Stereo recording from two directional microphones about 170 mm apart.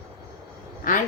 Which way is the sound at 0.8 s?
50° left (ahead or behind).